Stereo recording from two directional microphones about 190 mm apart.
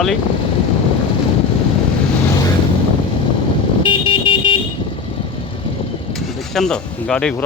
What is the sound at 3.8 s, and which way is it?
Vehicle, 25° left (ahead or behind).